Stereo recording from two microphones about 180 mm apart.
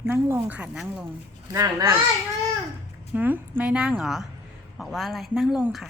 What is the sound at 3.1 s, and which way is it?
A woman's voice, 10° right (ahead or behind).